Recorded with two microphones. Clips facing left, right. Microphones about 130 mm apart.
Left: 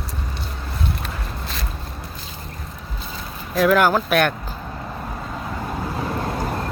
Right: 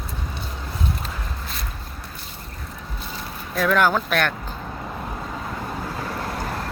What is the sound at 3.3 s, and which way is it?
Vehicle, 10° left (ahead or behind).